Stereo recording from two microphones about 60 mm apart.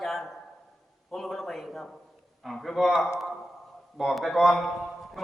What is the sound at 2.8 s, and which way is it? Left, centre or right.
A man's voice, centre.